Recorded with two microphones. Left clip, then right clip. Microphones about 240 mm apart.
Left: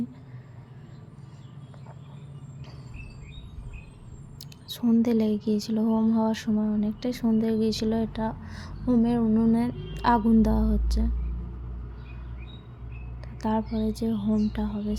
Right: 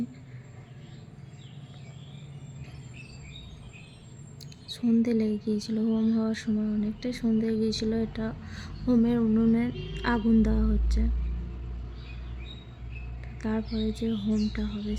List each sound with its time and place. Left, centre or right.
4.4 s a woman's voice: centre
13.4 s a woman's voice: centre